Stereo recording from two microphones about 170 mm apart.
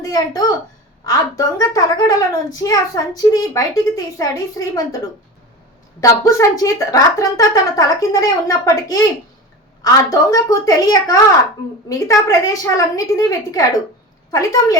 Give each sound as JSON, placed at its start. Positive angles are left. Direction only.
{"t": 0.0, "sound": "a woman's voice", "side_deg": 20}
{"t": 6.0, "sound": "a woman's voice", "side_deg": 20}